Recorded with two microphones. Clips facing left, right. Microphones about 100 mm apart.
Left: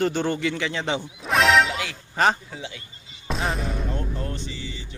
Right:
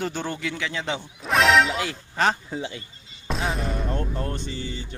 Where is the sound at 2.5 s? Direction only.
35° right (ahead or behind).